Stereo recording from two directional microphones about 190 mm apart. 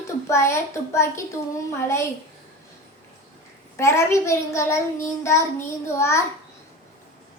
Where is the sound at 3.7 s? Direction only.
15° left (ahead or behind).